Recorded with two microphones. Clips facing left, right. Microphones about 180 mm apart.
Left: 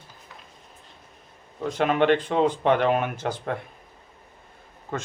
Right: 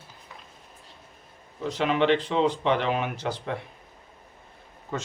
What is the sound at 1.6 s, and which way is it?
Speech, 50° left (ahead or behind).